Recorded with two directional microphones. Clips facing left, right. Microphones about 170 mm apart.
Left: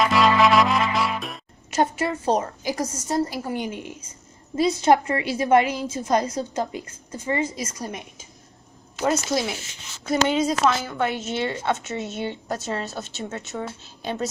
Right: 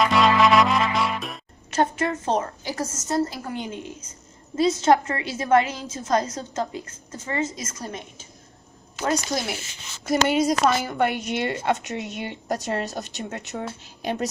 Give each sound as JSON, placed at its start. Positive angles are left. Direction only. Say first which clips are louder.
{"t": 0.0, "sound": "music", "louder": "even", "side_deg": 0}
{"t": 1.7, "sound": "a woman's voice", "louder": "even", "side_deg": 10}
{"t": 9.0, "sound": "speech", "louder": "left 2 dB", "side_deg": 0}
{"t": 10.1, "sound": "a woman's voice", "louder": "right 1 dB", "side_deg": -10}